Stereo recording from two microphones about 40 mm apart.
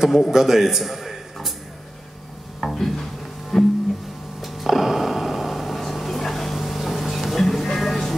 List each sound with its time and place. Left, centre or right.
0.0 s a man's voice: centre
2.6 s music: centre
4.4 s a sound: centre